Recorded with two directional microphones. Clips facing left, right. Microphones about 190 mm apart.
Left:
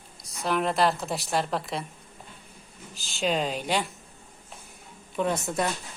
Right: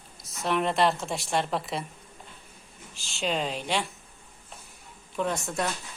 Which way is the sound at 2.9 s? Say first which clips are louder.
Left 3 dB; centre (ahead or behind).